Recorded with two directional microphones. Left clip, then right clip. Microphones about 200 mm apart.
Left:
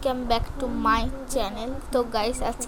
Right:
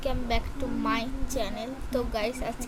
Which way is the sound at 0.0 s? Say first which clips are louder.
Left 6 dB; 25° left (ahead or behind).